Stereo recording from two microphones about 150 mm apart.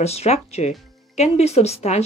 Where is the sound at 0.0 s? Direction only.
45° left (ahead or behind).